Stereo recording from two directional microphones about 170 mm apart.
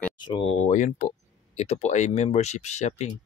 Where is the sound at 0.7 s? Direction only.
45° left (ahead or behind).